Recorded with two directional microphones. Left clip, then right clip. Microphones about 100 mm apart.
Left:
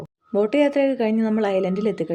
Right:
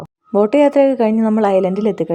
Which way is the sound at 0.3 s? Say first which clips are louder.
Right 7 dB; 55° right (ahead or behind).